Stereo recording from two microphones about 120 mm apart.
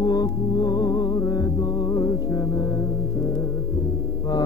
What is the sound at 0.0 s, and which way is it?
Music, 35° left (ahead or behind).